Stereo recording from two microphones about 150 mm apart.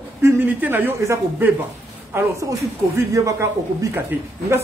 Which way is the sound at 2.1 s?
20° right (ahead or behind).